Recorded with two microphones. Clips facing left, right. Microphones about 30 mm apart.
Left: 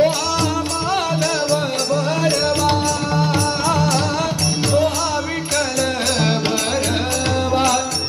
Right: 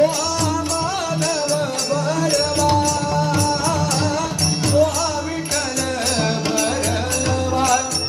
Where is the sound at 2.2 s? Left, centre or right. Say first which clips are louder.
Left 1 dB; left.